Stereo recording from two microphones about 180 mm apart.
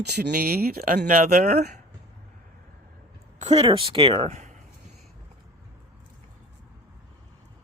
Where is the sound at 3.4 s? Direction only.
35° right (ahead or behind).